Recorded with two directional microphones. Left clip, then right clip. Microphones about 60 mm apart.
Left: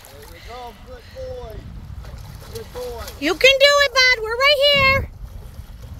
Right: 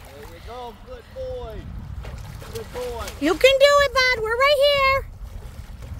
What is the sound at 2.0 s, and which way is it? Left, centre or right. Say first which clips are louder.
Boat: right 2 dB; right.